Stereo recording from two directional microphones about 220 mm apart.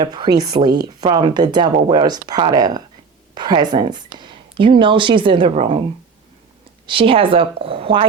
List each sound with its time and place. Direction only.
0.0 s speech: 20° right (ahead or behind)
6.8 s speech: 25° right (ahead or behind)